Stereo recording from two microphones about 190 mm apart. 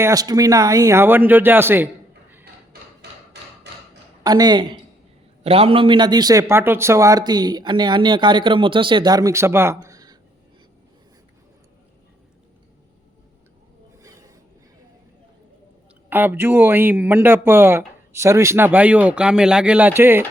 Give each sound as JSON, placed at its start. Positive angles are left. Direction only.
{"t": 0.0, "sound": "speech", "side_deg": -20}
{"t": 3.0, "sound": "a sound", "side_deg": -60}
{"t": 4.2, "sound": "a man's voice", "side_deg": -20}
{"t": 14.0, "sound": "train", "side_deg": -15}
{"t": 16.0, "sound": "speech", "side_deg": -10}